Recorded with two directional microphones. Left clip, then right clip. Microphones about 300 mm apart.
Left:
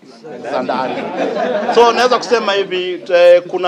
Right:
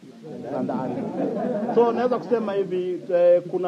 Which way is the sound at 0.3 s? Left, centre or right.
Centre.